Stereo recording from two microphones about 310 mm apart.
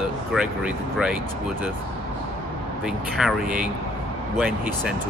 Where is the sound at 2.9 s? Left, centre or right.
Centre.